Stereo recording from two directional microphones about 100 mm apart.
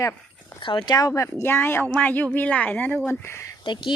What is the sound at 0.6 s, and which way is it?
Speech, 55° left (ahead or behind).